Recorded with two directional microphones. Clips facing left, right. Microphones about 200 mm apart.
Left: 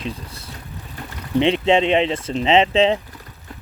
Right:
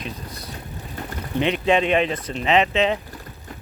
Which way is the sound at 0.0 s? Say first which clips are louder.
Left 3 dB; 30° left (ahead or behind).